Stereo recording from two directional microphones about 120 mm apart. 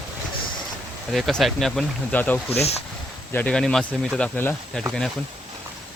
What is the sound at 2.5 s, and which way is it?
Speech, 60° left (ahead or behind).